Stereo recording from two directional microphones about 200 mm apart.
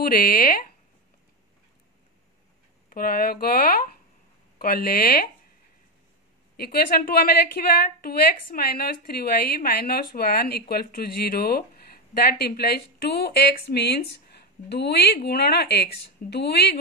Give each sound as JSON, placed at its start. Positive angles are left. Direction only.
{"t": 0.2, "sound": "a woman's voice", "side_deg": 45}
{"t": 2.9, "sound": "a woman's voice", "side_deg": 45}
{"t": 6.5, "sound": "a woman's voice", "side_deg": 50}